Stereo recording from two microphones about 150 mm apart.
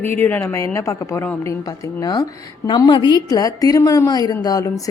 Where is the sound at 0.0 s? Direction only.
15° left (ahead or behind).